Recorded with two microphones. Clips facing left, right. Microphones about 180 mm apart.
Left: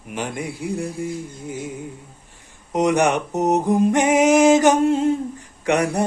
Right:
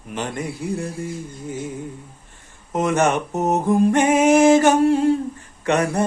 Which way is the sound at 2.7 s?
15° left (ahead or behind).